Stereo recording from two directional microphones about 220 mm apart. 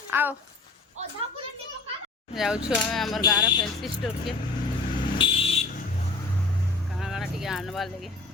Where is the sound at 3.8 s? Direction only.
Centre (ahead or behind).